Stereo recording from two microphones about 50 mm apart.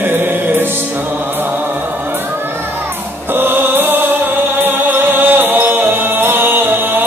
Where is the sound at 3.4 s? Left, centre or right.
Right.